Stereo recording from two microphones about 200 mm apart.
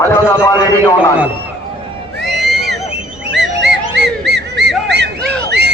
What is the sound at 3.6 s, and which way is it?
Music, 60° right (ahead or behind).